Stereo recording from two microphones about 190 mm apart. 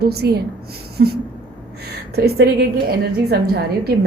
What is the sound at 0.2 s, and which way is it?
A woman's voice, 60° right (ahead or behind).